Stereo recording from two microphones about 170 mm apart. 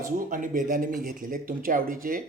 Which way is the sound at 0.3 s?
50° right (ahead or behind).